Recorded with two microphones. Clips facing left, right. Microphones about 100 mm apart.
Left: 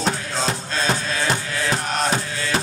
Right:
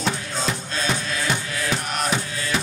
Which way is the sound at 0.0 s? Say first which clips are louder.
Left 2 dB; 35° left (ahead or behind).